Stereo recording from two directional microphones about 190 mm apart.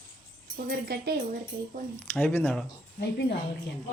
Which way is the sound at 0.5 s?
55° right (ahead or behind).